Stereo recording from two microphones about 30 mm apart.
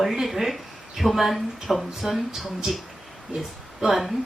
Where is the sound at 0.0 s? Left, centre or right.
Centre.